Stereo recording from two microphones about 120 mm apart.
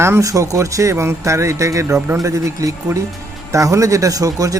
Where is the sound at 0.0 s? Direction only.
25° right (ahead or behind).